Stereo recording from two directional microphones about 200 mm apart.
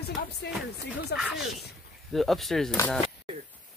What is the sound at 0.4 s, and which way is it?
Speech, 55° left (ahead or behind).